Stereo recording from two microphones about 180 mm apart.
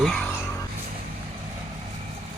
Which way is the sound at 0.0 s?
5° left (ahead or behind).